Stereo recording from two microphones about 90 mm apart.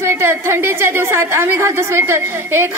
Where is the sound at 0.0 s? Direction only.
25° right (ahead or behind).